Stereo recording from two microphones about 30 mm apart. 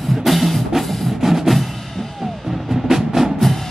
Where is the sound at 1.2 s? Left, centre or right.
Centre.